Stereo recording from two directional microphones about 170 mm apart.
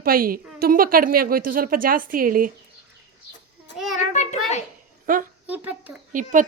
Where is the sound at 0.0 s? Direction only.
60° right (ahead or behind).